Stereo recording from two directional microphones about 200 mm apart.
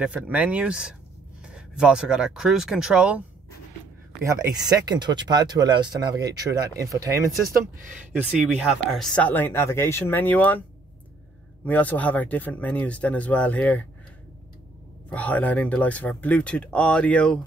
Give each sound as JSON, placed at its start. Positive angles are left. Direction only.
{"t": 0.0, "sound": "speech", "side_deg": -5}
{"t": 4.2, "sound": "speech", "side_deg": -15}
{"t": 8.3, "sound": "speech", "side_deg": -5}
{"t": 11.6, "sound": "speech", "side_deg": 10}
{"t": 15.0, "sound": "speech", "side_deg": 5}